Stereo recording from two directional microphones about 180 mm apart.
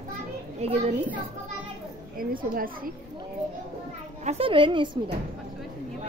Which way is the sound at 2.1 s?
55° right (ahead or behind).